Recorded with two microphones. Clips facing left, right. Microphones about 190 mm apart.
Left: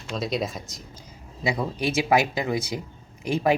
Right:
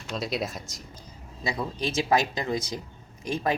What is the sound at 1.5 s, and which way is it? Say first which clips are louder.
Speech: left 4 dB; 10° left (ahead or behind).